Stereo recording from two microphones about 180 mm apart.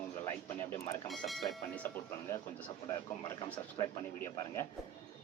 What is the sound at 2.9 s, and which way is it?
Speech, 20° left (ahead or behind).